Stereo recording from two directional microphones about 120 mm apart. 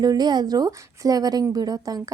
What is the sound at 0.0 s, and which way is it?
Speech, 35° right (ahead or behind).